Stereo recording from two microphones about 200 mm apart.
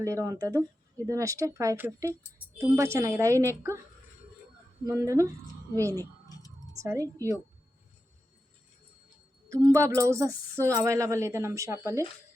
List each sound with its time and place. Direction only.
0.0 s speech: 15° right (ahead or behind)
4.9 s speech: 15° right (ahead or behind)
6.0 s a sound: 15° left (ahead or behind)
6.7 s speech: 15° right (ahead or behind)
9.5 s speech: 15° right (ahead or behind)